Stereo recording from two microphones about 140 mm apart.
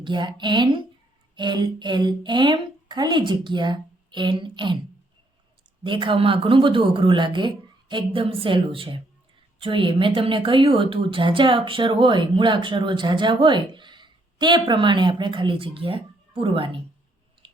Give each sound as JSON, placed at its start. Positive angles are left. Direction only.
{"t": 0.0, "sound": "a woman's voice", "side_deg": -35}
{"t": 5.8, "sound": "a woman's voice", "side_deg": -35}
{"t": 17.4, "sound": "squish", "side_deg": -35}